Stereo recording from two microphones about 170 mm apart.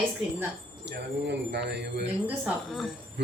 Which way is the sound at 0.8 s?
85° right.